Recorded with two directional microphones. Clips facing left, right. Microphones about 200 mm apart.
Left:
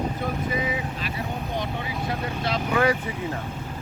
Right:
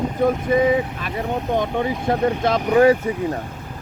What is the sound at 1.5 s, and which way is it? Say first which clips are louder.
Speech: right 8 dB; 50° right (ahead or behind).